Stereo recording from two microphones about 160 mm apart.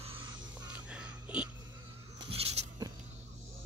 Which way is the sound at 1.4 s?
30° right (ahead or behind).